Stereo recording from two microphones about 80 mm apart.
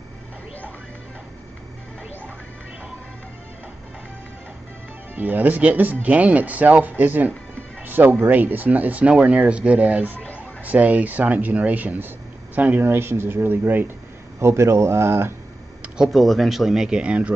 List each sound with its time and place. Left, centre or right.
5.1 s speech: right
14.4 s speech: right
16.1 s speech: centre